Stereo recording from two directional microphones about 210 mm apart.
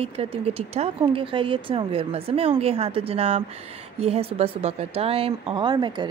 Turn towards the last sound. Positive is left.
turn(degrees=-20)  # may be behind; listen again after turning